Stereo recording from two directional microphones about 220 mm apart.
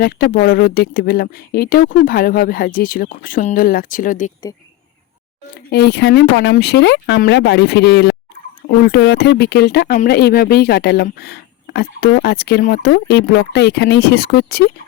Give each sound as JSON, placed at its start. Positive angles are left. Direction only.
{"t": 0.0, "sound": "speech", "side_deg": 45}
{"t": 5.7, "sound": "speech", "side_deg": 50}